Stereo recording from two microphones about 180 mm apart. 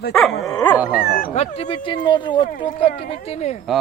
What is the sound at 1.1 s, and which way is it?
Speech, 55° left (ahead or behind).